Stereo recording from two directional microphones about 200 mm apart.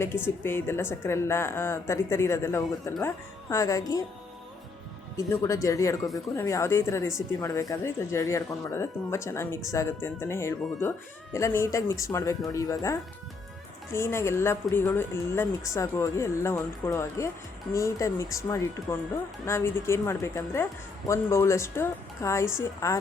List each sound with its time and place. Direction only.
0.0 s a woman's voice: 10° left (ahead or behind)
5.1 s a woman's voice: 15° left (ahead or behind)